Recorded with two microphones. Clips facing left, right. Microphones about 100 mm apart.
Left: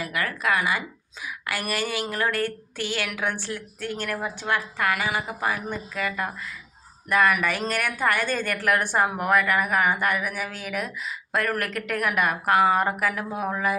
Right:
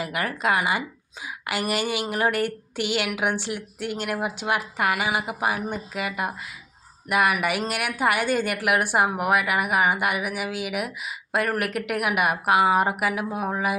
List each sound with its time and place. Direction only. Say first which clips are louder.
0.0 s speech: right 1 dB; 25° right (ahead or behind)